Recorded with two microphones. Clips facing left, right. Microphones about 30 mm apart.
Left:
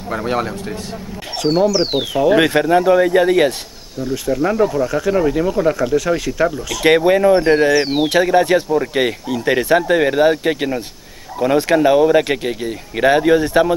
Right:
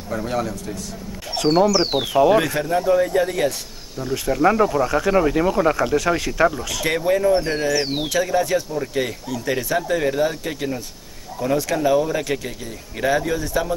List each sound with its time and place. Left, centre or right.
0.1 s speech: left
1.4 s speech: centre
2.3 s speech: left
4.0 s speech: centre
6.8 s speech: left
8.1 s speech: left